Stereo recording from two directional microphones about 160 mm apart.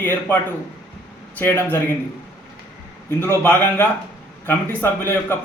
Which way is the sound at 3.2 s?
15° left (ahead or behind).